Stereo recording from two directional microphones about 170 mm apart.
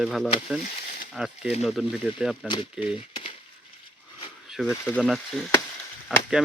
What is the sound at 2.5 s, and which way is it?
Speech, 30° left (ahead or behind).